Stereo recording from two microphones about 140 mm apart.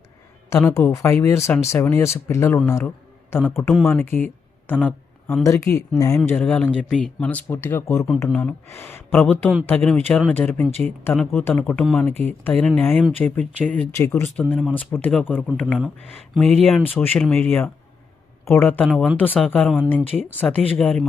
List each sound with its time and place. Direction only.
0.5 s a man's voice: 15° left (ahead or behind)
4.6 s a sound: 15° left (ahead or behind)
5.4 s speech: 20° left (ahead or behind)
16.5 s speech: centre (ahead or behind)
16.9 s speech: 15° left (ahead or behind)
18.9 s speech: centre (ahead or behind)
19.1 s speech: 10° left (ahead or behind)